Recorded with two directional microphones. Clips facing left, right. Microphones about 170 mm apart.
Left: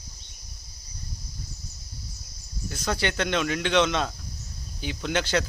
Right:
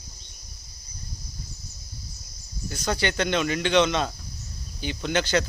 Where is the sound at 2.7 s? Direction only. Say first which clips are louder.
Right 1 dB; centre (ahead or behind).